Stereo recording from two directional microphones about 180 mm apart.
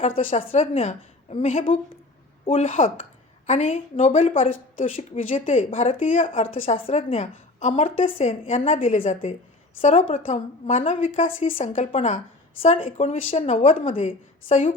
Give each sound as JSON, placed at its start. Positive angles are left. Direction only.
{"t": 0.2, "sound": "a woman's voice", "side_deg": 30}